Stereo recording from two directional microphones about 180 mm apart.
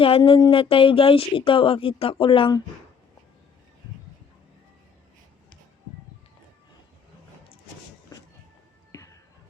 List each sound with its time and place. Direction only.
0.0 s speech: 30° left (ahead or behind)
8.9 s music: 15° left (ahead or behind)